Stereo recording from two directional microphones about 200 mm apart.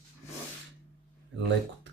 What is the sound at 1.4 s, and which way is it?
Speech, 65° right (ahead or behind).